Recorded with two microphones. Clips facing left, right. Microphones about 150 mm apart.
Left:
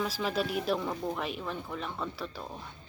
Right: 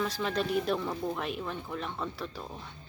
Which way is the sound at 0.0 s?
5° left (ahead or behind).